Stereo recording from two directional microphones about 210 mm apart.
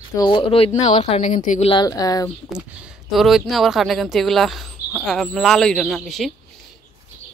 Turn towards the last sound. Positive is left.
turn(degrees=0)  # may be behind; listen again after turning